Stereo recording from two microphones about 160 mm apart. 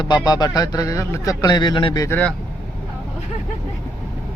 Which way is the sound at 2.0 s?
15° left (ahead or behind).